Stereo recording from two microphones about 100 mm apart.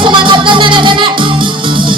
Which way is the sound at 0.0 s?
55° right (ahead or behind).